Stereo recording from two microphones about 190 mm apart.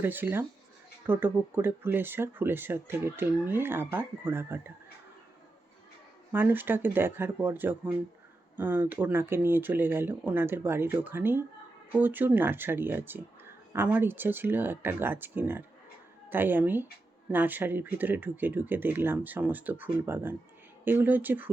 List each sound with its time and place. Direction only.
0.0 s speech: 10° right (ahead or behind)
6.3 s speech: 10° right (ahead or behind)